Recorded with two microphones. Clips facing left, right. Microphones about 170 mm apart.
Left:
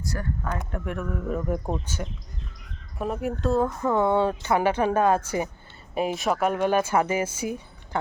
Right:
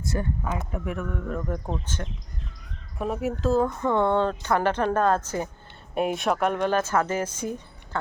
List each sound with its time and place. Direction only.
0.1 s speech: 20° right (ahead or behind)
0.7 s speech: centre (ahead or behind)